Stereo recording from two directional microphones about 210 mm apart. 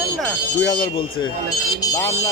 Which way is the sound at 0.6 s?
20° left (ahead or behind).